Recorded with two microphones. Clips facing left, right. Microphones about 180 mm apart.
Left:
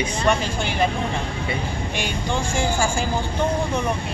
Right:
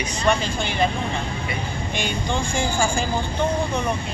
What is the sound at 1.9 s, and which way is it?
Speech, 5° left (ahead or behind).